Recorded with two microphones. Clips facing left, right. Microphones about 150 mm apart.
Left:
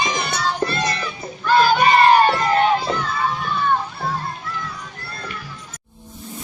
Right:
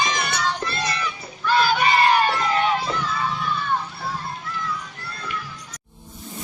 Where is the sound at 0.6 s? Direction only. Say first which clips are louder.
Left 5 dB; 45° left (ahead or behind).